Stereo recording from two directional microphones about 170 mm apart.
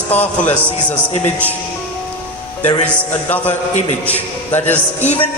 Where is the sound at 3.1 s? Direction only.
10° left (ahead or behind).